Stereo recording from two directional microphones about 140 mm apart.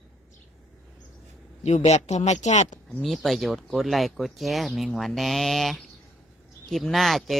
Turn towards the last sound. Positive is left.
turn(degrees=0)  # may be behind; listen again after turning